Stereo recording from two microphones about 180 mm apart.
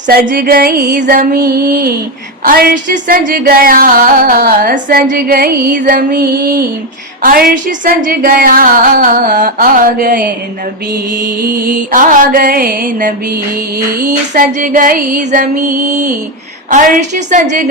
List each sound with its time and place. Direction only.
0.1 s music: 55° right (ahead or behind)